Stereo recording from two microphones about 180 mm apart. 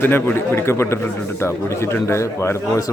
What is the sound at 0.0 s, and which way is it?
A man's voice, 10° left (ahead or behind).